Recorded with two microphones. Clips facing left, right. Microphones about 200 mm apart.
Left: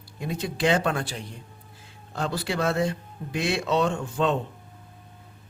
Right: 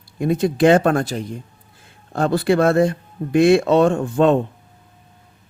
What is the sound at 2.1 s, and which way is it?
Speech, 55° right (ahead or behind).